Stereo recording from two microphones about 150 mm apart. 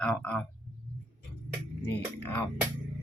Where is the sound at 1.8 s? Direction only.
15° left (ahead or behind).